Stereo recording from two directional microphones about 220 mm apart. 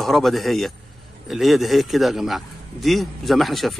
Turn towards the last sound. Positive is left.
turn(degrees=0)  # may be behind; listen again after turning